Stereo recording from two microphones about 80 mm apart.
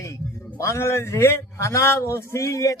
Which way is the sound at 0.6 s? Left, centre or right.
Left.